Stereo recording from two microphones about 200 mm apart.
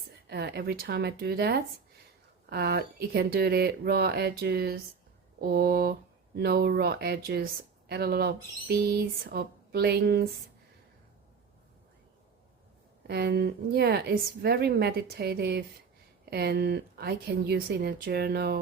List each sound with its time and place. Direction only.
0.3 s a woman's voice: 55° right (ahead or behind)
13.1 s a woman's voice: 55° right (ahead or behind)